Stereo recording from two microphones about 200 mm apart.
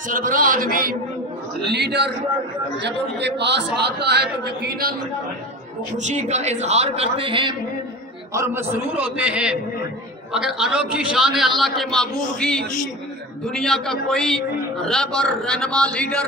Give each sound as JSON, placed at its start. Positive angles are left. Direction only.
{"t": 0.1, "sound": "a man's voice", "side_deg": -45}
{"t": 1.7, "sound": "a man's voice", "side_deg": -55}
{"t": 6.0, "sound": "a man's voice", "side_deg": -35}
{"t": 8.3, "sound": "a man's voice", "side_deg": -15}